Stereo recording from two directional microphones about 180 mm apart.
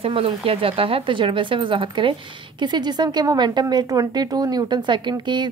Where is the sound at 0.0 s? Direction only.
30° right (ahead or behind).